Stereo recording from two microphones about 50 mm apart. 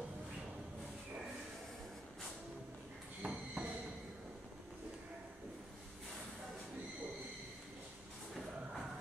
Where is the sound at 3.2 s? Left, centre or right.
Right.